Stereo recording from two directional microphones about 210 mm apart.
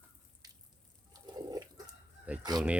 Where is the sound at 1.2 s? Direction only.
20° right (ahead or behind).